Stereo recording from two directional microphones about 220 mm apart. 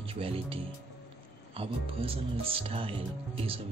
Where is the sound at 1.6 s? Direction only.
25° right (ahead or behind).